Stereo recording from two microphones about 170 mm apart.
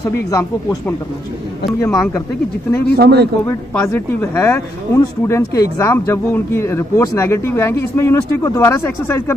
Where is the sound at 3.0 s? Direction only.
70° right (ahead or behind).